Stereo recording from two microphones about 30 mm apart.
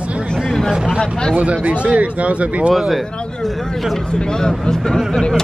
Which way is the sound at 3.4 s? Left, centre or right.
Centre.